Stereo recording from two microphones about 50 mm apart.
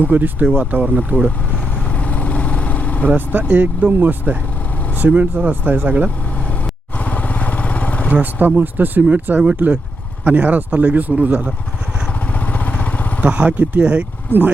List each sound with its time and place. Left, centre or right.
0.0 s speech: right
2.0 s vehicle: left
3.5 s speech: right
7.0 s vehicle: left
8.1 s speech: right
13.2 s speech: right
14.3 s speech: right